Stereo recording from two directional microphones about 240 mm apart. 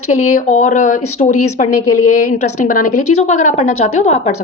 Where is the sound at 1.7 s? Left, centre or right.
Left.